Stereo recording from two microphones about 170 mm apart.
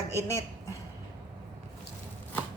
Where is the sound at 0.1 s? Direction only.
15° left (ahead or behind).